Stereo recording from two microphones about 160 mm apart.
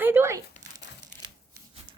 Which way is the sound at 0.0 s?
15° right (ahead or behind).